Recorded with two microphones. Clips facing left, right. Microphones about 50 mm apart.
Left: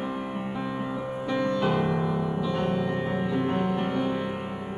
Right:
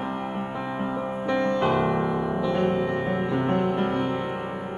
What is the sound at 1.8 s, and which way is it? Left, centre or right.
Music, right.